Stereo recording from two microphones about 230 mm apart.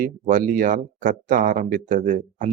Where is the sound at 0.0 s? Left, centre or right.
Right.